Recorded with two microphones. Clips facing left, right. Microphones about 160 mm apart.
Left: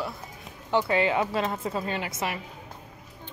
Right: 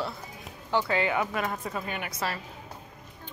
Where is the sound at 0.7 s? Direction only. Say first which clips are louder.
Left 3 dB; 25° left (ahead or behind).